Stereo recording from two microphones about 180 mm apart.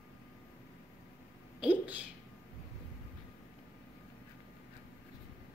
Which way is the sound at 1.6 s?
10° right (ahead or behind).